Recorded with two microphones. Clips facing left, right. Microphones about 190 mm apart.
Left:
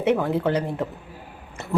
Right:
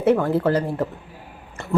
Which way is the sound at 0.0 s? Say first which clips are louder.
Right 3 dB; centre (ahead or behind).